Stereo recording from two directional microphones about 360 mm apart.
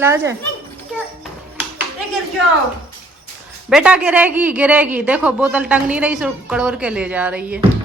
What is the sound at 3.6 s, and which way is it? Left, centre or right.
Speech, centre.